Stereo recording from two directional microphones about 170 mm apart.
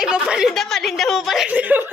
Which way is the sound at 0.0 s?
5° right (ahead or behind).